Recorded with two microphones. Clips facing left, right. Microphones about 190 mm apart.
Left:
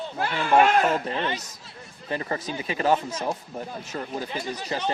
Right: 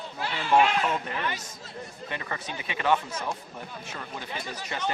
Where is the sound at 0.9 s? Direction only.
30° left (ahead or behind).